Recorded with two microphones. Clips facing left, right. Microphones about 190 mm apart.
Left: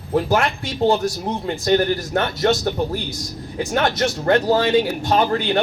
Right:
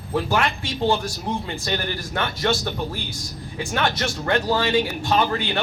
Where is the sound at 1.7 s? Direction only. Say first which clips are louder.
Left 10 dB; 45° left (ahead or behind).